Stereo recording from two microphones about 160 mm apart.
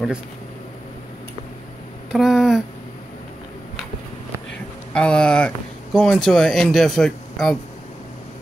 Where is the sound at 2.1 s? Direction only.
Centre (ahead or behind).